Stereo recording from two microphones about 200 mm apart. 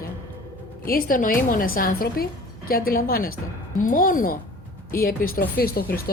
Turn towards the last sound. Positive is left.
turn(degrees=50)  # may be behind; listen again after turning